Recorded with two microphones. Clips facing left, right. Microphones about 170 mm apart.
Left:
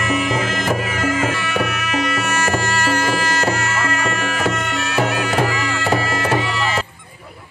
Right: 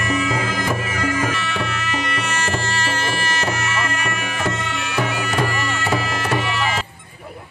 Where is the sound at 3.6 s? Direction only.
65° left (ahead or behind); by 6.0 s 90° left.